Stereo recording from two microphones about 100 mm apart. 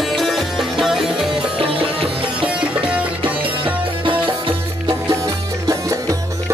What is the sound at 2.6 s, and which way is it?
Music, 10° right (ahead or behind).